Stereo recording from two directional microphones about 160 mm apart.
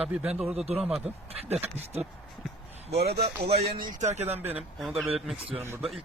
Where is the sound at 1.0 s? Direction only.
40° right (ahead or behind).